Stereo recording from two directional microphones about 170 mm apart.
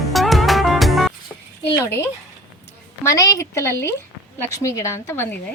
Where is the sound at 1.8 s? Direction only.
15° left (ahead or behind).